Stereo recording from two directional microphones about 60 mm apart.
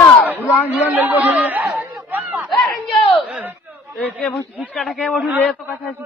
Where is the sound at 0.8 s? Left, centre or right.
Right.